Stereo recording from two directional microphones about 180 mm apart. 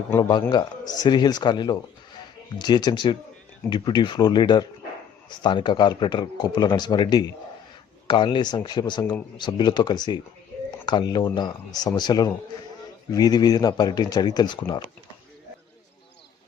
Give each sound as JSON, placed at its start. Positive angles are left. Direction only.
{"t": 0.2, "sound": "speech", "side_deg": 25}